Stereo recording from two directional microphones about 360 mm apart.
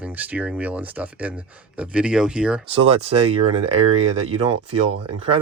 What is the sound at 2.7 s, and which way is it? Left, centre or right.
Speech, centre.